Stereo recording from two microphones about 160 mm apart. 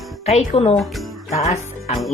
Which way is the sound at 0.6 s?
35° left (ahead or behind).